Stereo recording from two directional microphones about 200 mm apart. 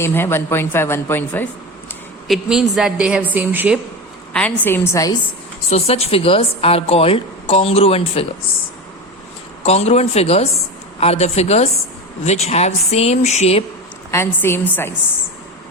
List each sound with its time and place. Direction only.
0.0 s a woman's voice: 10° left (ahead or behind)
2.2 s a woman's voice: centre (ahead or behind)
4.3 s a woman's voice: 5° left (ahead or behind)
5.7 s a woman's voice: 30° left (ahead or behind)
9.6 s speech: 30° left (ahead or behind)
14.1 s a woman's voice: 10° left (ahead or behind)